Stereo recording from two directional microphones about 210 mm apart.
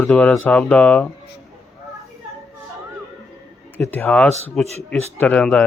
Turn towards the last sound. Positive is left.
turn(degrees=5)  # may be behind; listen again after turning